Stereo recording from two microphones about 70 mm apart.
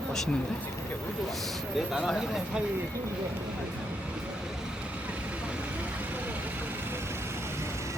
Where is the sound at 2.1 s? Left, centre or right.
Centre.